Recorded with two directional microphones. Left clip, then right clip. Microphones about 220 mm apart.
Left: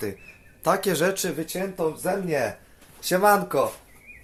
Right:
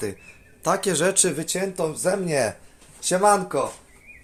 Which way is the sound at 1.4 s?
45° right (ahead or behind).